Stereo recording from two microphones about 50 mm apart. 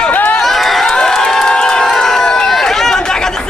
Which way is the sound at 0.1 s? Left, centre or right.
Left.